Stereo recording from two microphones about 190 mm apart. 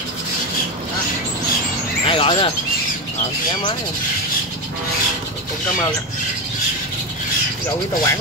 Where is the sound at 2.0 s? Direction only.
30° left (ahead or behind).